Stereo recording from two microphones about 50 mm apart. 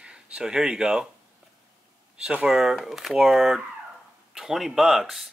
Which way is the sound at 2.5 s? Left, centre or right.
Centre.